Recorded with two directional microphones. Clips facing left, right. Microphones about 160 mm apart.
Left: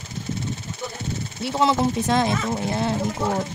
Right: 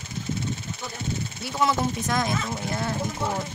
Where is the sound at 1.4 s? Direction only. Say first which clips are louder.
Left 5 dB; 25° left (ahead or behind).